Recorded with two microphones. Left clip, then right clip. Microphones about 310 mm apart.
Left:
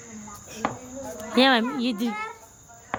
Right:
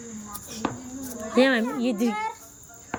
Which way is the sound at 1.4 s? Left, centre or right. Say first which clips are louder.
Left 1 dB; centre.